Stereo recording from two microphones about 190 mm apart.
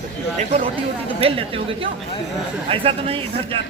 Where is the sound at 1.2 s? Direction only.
30° right (ahead or behind).